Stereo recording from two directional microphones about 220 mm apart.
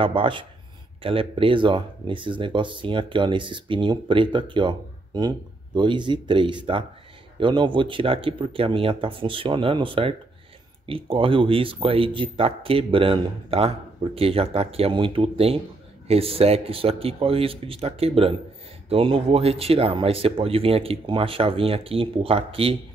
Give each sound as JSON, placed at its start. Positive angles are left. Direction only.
{"t": 0.0, "sound": "speech", "side_deg": -25}